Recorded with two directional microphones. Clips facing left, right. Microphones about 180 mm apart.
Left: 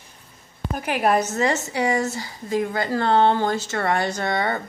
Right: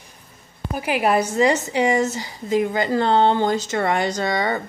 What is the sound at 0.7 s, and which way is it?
A woman's voice, 5° right (ahead or behind).